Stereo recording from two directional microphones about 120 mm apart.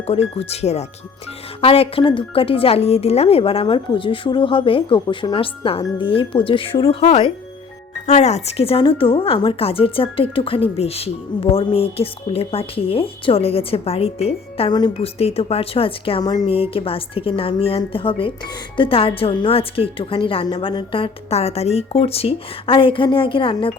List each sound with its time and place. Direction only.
0.1 s speech: 60° left (ahead or behind)
1.6 s speech: 55° left (ahead or behind)
8.0 s speech: 70° left (ahead or behind)
14.7 s speech: 35° left (ahead or behind)
14.9 s speech: 55° left (ahead or behind)
16.2 s speech: 35° left (ahead or behind)
16.5 s speech: 50° left (ahead or behind)